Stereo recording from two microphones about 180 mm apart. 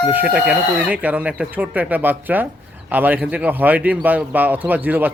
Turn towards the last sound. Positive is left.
turn(degrees=-10)  # may be behind; listen again after turning